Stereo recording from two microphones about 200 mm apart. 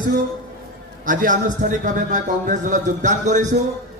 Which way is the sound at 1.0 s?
40° right (ahead or behind).